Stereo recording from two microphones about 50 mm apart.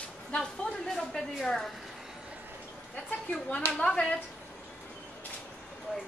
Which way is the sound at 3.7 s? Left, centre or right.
Centre.